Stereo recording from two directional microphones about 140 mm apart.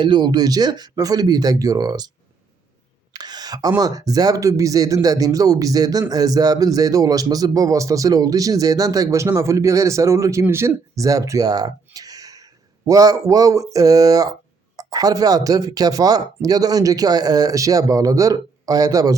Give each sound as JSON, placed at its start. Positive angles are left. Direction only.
{"t": 0.0, "sound": "a man's voice", "side_deg": -35}
{"t": 3.1, "sound": "a sound", "side_deg": -30}
{"t": 3.8, "sound": "a man's voice", "side_deg": -25}